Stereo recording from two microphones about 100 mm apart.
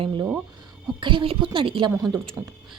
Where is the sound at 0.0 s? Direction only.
55° right (ahead or behind).